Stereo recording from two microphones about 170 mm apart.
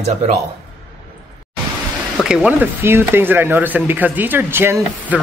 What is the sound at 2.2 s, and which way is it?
Speech, 5° right (ahead or behind).